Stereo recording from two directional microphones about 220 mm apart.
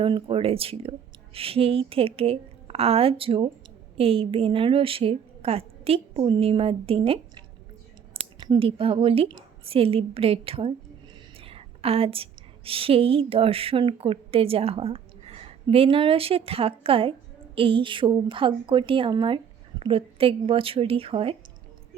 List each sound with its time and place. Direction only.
0.0 s a woman's voice: 25° right (ahead or behind)